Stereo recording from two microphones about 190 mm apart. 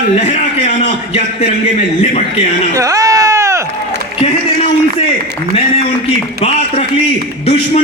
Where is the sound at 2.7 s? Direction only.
15° right (ahead or behind).